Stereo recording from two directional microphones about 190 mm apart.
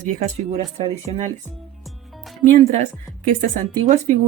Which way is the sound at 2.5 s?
35° right (ahead or behind).